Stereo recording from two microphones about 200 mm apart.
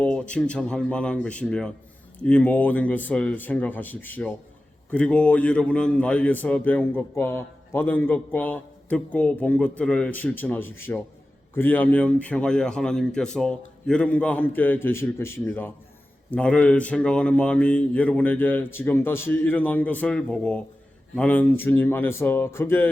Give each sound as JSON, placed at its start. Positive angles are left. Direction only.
{"t": 0.0, "sound": "a man's voice", "side_deg": 5}